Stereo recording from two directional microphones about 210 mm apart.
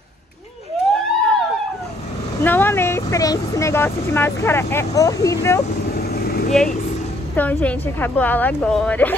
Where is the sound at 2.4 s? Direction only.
10° left (ahead or behind).